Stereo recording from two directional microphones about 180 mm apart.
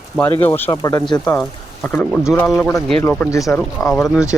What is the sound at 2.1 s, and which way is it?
Speech, 5° right (ahead or behind).